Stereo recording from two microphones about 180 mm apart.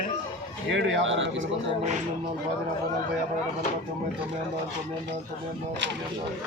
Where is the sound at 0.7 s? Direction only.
90° right.